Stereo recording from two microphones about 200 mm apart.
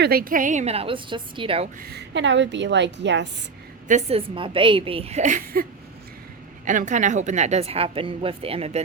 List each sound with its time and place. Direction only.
0.0 s a woman's voice: 50° right (ahead or behind); by 1.7 s 30° right (ahead or behind)
1.8 s a woman's voice: 55° right (ahead or behind)
3.8 s a woman's voice: 35° right (ahead or behind)
4.4 s a woman's voice: 25° right (ahead or behind); by 5.6 s 40° right (ahead or behind)
6.7 s a woman's voice: 40° right (ahead or behind)